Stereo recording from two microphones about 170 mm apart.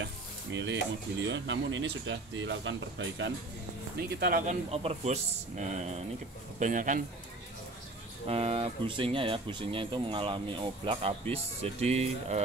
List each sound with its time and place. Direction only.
0.0 s stir: 90° right
1.2 s speech: 90° right
4.2 s speech: 60° right (ahead or behind)
4.6 s a man's voice: 40° right (ahead or behind)
8.3 s speech: 35° right (ahead or behind)